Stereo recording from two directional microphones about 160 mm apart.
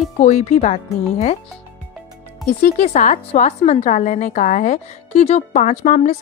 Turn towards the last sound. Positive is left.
turn(degrees=45)  # may be behind; listen again after turning